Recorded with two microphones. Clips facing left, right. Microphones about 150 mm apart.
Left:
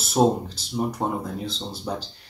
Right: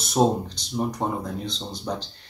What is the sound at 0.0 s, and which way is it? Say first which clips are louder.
Speech: left 1 dB; 5° left (ahead or behind).